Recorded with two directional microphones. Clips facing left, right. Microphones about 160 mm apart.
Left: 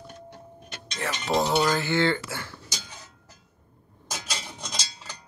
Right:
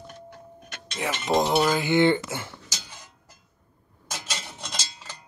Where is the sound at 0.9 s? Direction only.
10° right (ahead or behind).